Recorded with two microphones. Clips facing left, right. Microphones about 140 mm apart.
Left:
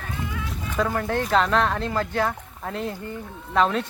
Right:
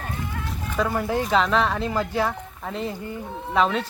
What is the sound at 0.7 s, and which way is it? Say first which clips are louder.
Speech: even; 5° right (ahead or behind).